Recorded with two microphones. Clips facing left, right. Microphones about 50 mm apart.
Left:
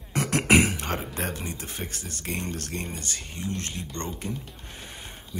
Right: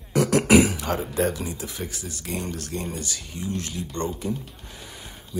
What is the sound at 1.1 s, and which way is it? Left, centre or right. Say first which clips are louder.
Speech: right 7 dB; left.